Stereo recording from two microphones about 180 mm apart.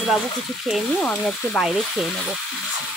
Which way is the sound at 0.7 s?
Centre (ahead or behind).